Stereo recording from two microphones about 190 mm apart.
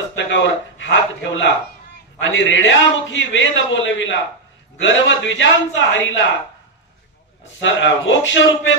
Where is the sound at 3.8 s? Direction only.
80° left.